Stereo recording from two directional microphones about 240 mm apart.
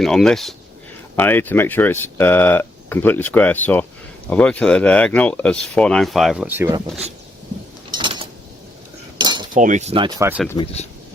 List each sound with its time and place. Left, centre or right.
0.0 s speech: centre
7.9 s keys jangling: centre
9.1 s cutlery: centre
9.6 s speech: right; by 10.4 s centre
10.6 s speech: left